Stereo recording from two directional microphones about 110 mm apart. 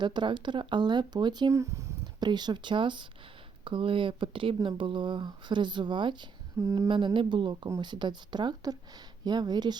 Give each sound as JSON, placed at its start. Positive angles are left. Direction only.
{"t": 0.0, "sound": "speech", "side_deg": -45}
{"t": 1.5, "sound": "speech", "side_deg": -25}
{"t": 2.2, "sound": "speech", "side_deg": -40}
{"t": 6.6, "sound": "speech", "side_deg": -25}
{"t": 6.8, "sound": "speech", "side_deg": -50}